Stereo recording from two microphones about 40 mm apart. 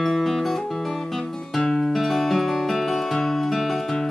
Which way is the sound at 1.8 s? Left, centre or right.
Centre.